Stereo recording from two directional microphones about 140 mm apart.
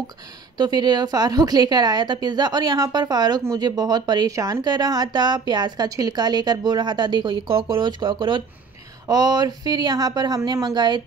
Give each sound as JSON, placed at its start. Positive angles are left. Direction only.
{"t": 0.6, "sound": "speech", "side_deg": -30}